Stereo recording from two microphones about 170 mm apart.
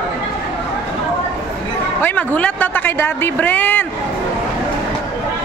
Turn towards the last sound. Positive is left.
turn(degrees=10)  # may be behind; listen again after turning